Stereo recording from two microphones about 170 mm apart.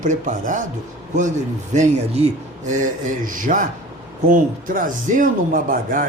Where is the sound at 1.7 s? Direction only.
40° right (ahead or behind).